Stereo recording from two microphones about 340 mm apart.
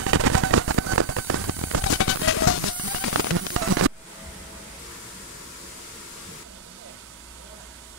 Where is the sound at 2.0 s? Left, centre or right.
Left.